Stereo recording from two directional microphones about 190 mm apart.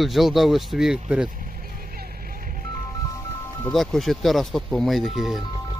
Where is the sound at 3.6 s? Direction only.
Centre (ahead or behind).